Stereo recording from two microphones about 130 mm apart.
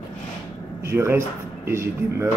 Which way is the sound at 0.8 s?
20° right (ahead or behind).